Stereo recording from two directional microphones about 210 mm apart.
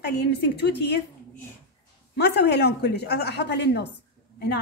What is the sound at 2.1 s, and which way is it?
A woman's voice, 50° left (ahead or behind).